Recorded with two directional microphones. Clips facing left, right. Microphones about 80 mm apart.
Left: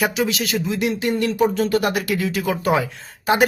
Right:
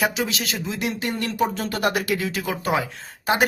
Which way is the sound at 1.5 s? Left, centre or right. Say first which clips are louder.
Left 4 dB; right.